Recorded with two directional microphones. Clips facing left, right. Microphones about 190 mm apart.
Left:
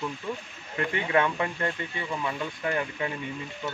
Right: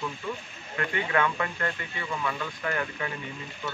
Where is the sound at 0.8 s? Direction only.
20° left (ahead or behind).